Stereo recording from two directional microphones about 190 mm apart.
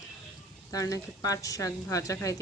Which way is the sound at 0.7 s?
20° left (ahead or behind).